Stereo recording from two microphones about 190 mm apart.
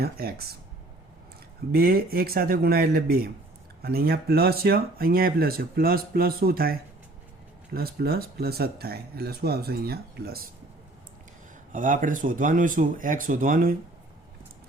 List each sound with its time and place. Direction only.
0.0 s speech: 55° right (ahead or behind)
1.7 s speech: 55° right (ahead or behind)
11.7 s speech: 45° right (ahead or behind)